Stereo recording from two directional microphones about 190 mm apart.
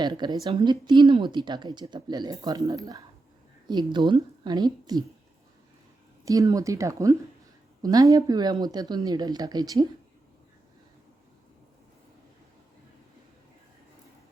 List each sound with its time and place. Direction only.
0.0 s speech: 20° right (ahead or behind)
6.2 s speech: 15° right (ahead or behind)